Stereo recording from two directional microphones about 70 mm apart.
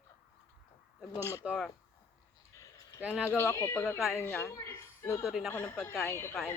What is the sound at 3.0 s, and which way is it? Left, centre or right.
Speech, centre.